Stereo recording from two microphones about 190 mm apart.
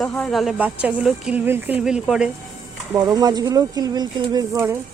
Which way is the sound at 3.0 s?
20° right (ahead or behind).